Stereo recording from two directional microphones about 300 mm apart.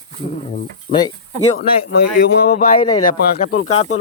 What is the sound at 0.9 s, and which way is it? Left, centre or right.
Speech, left.